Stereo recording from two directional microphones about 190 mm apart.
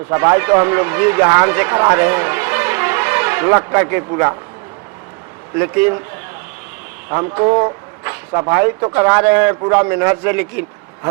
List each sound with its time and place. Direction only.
0.1 s speech: 15° right (ahead or behind)
5.5 s speech: 10° right (ahead or behind)
7.1 s speech: 20° right (ahead or behind)